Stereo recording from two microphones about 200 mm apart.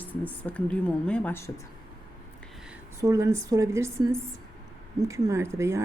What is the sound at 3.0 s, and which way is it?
Speech, 15° right (ahead or behind).